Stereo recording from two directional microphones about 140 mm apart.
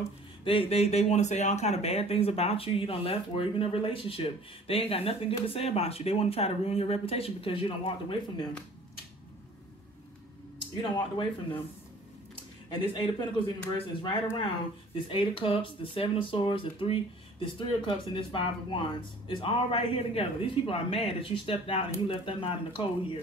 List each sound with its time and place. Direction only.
0.4 s speech: 40° left (ahead or behind)
10.8 s speech: 35° left (ahead or behind)
12.6 s speech: 30° left (ahead or behind)
15.0 s speech: 40° left (ahead or behind)